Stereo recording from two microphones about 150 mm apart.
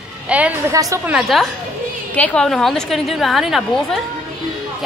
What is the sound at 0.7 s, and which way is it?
Speech, 20° right (ahead or behind).